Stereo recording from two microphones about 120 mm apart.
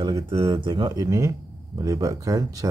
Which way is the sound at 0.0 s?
35° right (ahead or behind).